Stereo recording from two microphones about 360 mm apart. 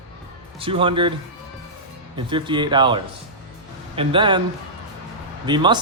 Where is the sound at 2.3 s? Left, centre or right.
Centre.